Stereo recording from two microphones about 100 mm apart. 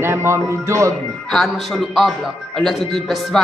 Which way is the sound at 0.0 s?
25° right (ahead or behind).